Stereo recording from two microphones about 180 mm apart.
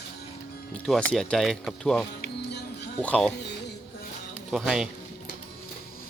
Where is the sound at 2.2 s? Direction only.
65° left (ahead or behind).